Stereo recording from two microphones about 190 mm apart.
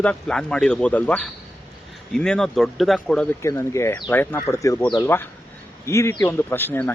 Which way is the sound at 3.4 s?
15° left (ahead or behind).